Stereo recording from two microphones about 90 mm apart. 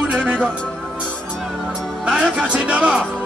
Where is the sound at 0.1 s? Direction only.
15° right (ahead or behind).